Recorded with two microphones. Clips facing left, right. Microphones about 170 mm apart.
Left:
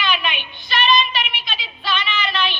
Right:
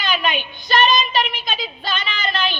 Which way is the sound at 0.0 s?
40° right (ahead or behind).